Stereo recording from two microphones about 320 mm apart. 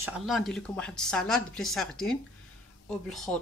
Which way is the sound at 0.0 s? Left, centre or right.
Centre.